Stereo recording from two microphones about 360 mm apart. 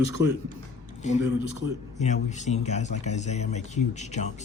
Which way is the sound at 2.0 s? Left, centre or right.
Centre.